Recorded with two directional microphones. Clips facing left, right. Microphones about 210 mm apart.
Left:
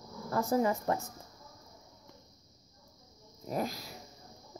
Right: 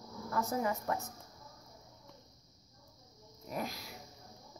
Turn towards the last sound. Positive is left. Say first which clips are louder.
# left 5 dB
turn(degrees=40)  # may be behind; listen again after turning